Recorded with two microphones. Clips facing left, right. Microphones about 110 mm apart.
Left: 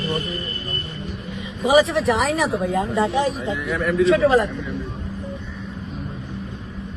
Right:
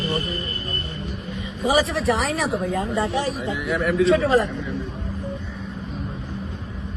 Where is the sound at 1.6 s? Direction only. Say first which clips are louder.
Left 4 dB; 25° left (ahead or behind).